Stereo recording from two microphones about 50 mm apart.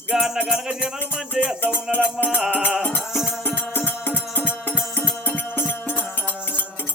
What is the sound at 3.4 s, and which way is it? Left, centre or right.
Music, left.